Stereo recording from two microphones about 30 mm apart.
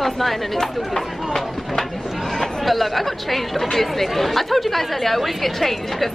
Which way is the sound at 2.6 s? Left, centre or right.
Centre.